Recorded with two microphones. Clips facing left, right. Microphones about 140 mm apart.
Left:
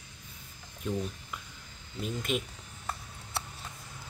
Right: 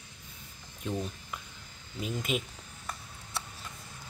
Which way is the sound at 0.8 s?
Centre (ahead or behind).